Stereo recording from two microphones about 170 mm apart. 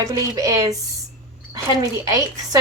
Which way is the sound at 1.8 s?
20° right (ahead or behind).